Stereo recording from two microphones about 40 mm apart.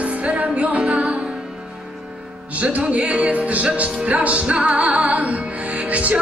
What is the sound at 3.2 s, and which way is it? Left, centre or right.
Music, right.